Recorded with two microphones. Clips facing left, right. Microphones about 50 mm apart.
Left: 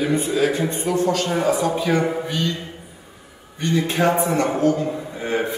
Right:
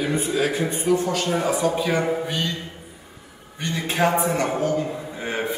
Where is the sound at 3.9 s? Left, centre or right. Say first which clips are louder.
Right 1 dB; centre.